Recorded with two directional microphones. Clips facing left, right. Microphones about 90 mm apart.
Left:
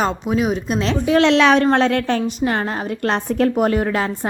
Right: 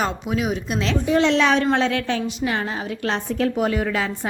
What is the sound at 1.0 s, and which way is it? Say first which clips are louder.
Speech: left 4 dB; 85° left.